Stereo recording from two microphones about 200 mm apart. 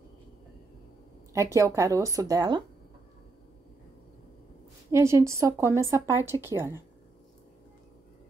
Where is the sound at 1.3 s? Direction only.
15° right (ahead or behind).